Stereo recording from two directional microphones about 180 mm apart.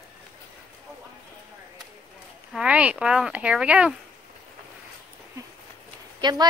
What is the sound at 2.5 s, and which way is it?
Speech, 5° right (ahead or behind).